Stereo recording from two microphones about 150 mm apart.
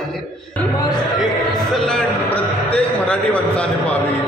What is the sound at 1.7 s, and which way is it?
A man's voice, 5° left (ahead or behind).